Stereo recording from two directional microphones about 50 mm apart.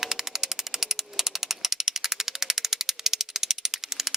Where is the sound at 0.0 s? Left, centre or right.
Centre.